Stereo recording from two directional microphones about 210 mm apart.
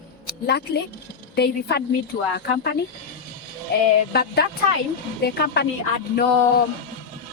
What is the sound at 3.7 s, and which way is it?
A woman's voice, 50° left (ahead or behind).